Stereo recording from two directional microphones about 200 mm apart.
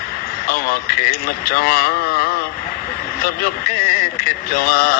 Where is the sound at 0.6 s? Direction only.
50° left (ahead or behind).